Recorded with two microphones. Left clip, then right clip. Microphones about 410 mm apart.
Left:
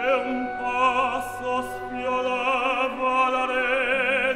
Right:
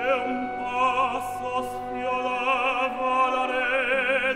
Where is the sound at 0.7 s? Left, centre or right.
Centre.